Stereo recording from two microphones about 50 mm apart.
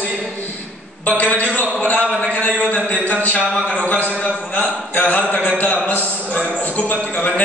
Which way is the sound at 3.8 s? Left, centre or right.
Left.